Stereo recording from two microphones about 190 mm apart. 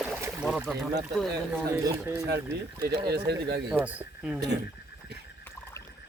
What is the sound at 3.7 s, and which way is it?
Speech, 10° right (ahead or behind).